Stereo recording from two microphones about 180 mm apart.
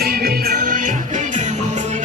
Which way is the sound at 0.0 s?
55° right (ahead or behind).